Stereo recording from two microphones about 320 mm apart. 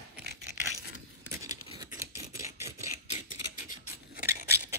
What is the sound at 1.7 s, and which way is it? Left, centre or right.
Scissors, centre.